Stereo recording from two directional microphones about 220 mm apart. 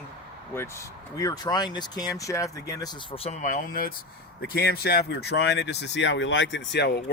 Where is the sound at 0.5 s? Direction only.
10° left (ahead or behind).